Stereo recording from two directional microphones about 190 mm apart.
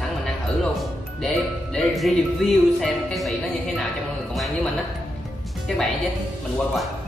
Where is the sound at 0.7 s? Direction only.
5° left (ahead or behind).